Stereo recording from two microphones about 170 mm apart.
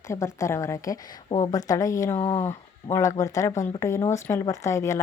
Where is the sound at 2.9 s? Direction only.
20° left (ahead or behind).